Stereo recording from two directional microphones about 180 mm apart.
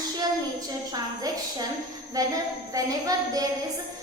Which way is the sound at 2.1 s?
20° right (ahead or behind).